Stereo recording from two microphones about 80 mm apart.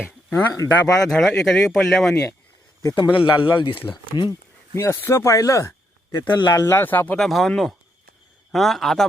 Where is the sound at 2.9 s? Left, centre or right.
Left.